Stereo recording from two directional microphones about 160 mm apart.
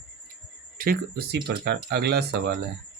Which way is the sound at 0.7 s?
65° right (ahead or behind).